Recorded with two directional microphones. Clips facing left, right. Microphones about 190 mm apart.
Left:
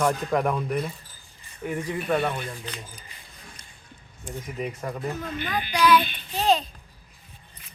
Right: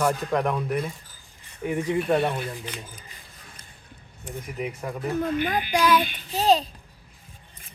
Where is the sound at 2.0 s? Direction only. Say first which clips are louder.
Right 1 dB; centre (ahead or behind).